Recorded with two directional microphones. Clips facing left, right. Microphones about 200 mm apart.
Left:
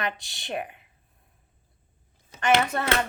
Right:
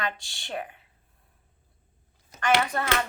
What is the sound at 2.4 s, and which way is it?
Speech, 25° left (ahead or behind).